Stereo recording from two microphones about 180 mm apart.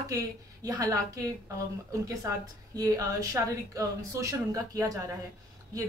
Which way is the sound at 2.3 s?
20° right (ahead or behind).